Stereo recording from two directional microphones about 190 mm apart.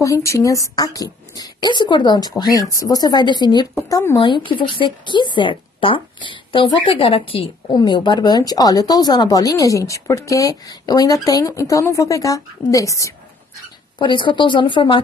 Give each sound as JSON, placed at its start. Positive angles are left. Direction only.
{"t": 0.0, "sound": "speech", "side_deg": 15}